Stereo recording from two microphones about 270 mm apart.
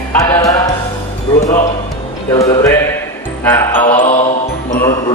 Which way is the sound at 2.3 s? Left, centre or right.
Centre.